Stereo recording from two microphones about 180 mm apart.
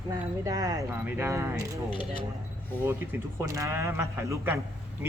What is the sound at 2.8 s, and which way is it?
Speech, 15° right (ahead or behind).